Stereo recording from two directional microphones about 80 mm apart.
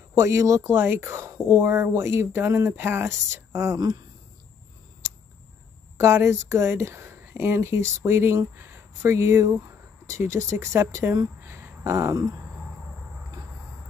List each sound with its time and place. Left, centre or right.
0.1 s speech: right
3.7 s speech: right
5.9 s speech: right
11.4 s a sound: right